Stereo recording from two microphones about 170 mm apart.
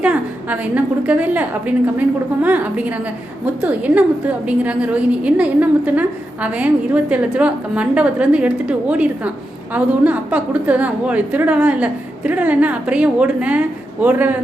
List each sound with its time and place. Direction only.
0.0 s a woman's voice: 10° right (ahead or behind)